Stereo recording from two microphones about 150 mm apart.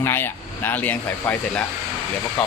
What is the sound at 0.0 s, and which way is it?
Speech, 15° left (ahead or behind).